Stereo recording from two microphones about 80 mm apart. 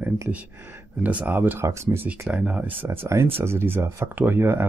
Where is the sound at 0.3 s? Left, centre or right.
Centre.